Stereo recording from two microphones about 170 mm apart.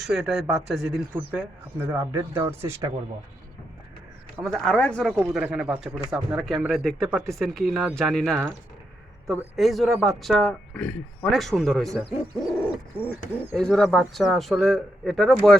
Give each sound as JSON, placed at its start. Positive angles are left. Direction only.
{"t": 0.0, "sound": "speech", "side_deg": 0}
{"t": 4.5, "sound": "speech", "side_deg": 5}
{"t": 9.6, "sound": "speech", "side_deg": 0}